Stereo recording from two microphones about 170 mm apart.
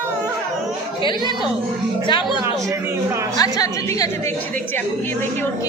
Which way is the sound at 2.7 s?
15° right (ahead or behind).